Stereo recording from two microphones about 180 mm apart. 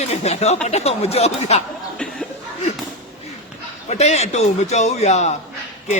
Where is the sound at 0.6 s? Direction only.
35° left (ahead or behind).